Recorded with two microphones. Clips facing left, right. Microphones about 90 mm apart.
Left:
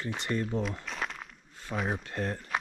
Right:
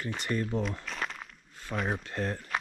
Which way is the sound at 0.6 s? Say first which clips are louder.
Even; centre (ahead or behind).